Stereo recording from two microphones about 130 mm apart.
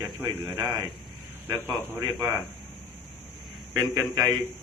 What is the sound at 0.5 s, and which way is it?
Speech, 35° right (ahead or behind).